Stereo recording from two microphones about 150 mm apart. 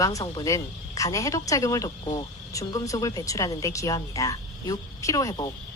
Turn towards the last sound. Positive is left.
turn(degrees=25)  # may be behind; listen again after turning